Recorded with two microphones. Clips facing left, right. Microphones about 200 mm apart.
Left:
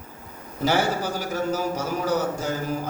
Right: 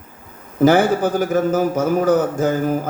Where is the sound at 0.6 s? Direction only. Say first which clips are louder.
Right 9 dB; 50° right (ahead or behind).